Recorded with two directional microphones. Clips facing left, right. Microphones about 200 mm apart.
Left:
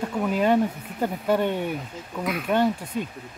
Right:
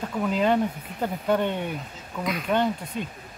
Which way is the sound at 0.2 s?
10° left (ahead or behind).